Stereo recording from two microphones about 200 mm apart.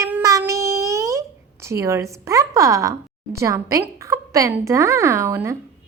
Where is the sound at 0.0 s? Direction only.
15° right (ahead or behind).